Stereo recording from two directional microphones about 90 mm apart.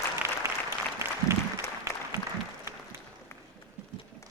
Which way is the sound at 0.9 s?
30° right (ahead or behind).